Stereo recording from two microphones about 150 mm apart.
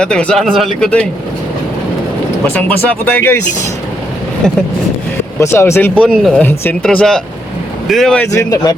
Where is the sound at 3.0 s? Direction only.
15° left (ahead or behind).